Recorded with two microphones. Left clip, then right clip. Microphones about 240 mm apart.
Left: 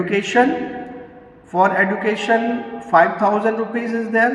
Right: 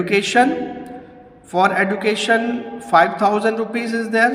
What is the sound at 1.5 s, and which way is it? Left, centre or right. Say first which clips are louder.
A man's voice: left 1 dB; right.